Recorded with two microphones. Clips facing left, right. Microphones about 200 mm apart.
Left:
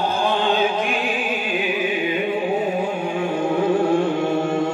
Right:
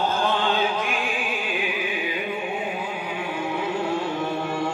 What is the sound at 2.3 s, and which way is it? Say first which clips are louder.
Music: left 8 dB; 40° left (ahead or behind).